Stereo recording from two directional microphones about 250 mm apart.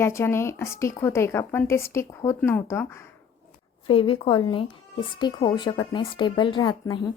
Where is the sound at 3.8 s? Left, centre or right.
Left.